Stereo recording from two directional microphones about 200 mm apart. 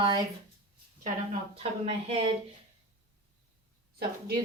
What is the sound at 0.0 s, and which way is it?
Speech, 20° right (ahead or behind).